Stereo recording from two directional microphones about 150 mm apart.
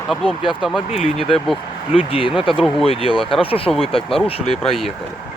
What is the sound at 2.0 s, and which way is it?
Speech, 35° left (ahead or behind).